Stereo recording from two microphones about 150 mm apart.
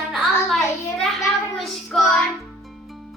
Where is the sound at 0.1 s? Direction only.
Centre (ahead or behind).